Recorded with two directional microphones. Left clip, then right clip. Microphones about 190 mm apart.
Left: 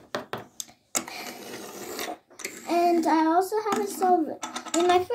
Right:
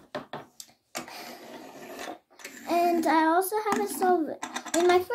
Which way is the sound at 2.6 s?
15° right (ahead or behind).